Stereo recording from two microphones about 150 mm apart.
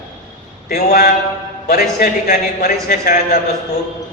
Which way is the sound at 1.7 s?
80° left.